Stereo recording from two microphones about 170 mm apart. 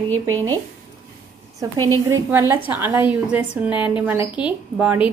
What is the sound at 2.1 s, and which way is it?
A woman's voice, 15° right (ahead or behind).